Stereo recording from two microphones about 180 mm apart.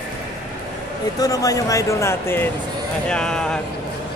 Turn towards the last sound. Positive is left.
turn(degrees=5)  # may be behind; listen again after turning